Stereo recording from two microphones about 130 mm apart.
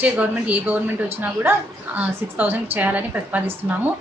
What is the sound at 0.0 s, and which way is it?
A woman's voice, 10° right (ahead or behind).